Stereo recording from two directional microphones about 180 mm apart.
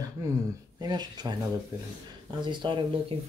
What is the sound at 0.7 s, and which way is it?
Speech, 20° right (ahead or behind).